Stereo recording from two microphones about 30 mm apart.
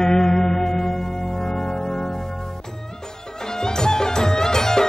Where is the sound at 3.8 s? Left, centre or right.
Left.